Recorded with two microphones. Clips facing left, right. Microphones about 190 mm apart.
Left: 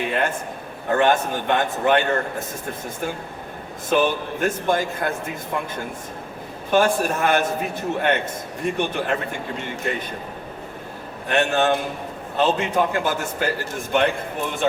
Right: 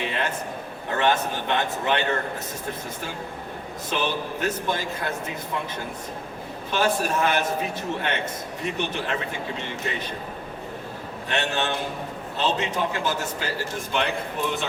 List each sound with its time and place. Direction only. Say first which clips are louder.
0.0 s a sound: left 5 dB; 50° left (ahead or behind)
0.9 s a man's voice: left 4 dB; 50° left (ahead or behind)
3.8 s a man's voice: left 7 dB; 50° left (ahead or behind)
6.7 s a man's voice: left 5 dB; 50° left (ahead or behind)
11.3 s a man's voice: left 7 dB; 50° left (ahead or behind)